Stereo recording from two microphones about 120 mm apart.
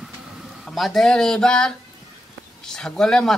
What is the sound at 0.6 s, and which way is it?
Speech, centre (ahead or behind).